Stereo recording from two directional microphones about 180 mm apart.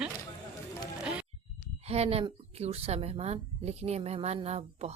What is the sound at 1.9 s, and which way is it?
A woman's voice, 35° right (ahead or behind).